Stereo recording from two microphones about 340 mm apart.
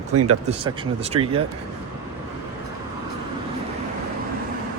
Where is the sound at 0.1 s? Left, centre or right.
Right.